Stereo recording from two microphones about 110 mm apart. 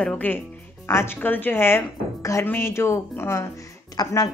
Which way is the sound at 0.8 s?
25° left (ahead or behind).